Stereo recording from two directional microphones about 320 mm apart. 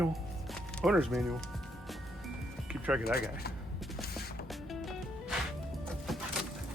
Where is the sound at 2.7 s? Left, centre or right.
Centre.